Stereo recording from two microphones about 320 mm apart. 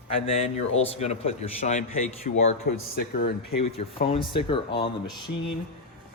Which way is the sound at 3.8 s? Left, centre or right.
Centre.